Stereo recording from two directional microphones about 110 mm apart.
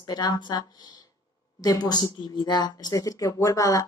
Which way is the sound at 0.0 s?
40° left (ahead or behind).